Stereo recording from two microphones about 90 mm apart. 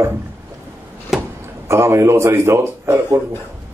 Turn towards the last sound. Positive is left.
turn(degrees=-30)  # may be behind; listen again after turning